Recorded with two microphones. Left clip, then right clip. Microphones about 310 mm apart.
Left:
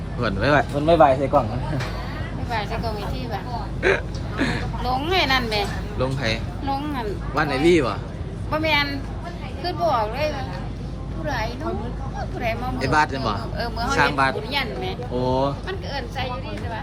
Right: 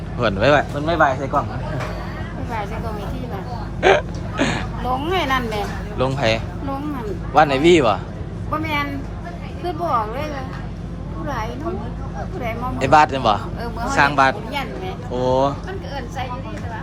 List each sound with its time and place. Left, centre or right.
0.2 s speech: centre
3.8 s speech: centre
7.3 s speech: centre
12.4 s speech: centre